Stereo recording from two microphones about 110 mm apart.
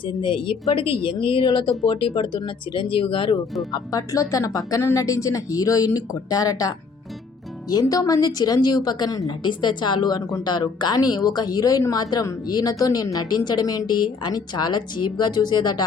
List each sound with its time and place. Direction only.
0.0 s speech: 50° left (ahead or behind)
3.7 s a woman's voice: 35° left (ahead or behind)